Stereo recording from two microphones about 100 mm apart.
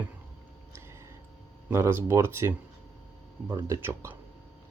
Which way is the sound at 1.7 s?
25° right (ahead or behind).